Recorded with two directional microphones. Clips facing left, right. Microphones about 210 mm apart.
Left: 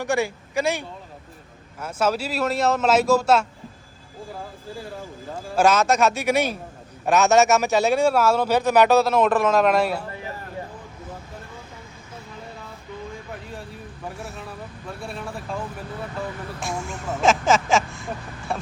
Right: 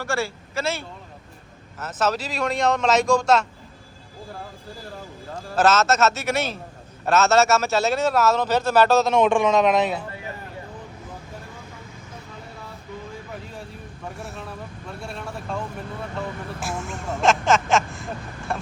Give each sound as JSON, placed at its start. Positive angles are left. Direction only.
{"t": 0.0, "sound": "a man's voice", "side_deg": 15}
{"t": 5.5, "sound": "a man's voice", "side_deg": 15}
{"t": 14.2, "sound": "vehicle", "side_deg": 0}
{"t": 15.0, "sound": "a man's voice", "side_deg": 5}
{"t": 16.6, "sound": "vehicle", "side_deg": -5}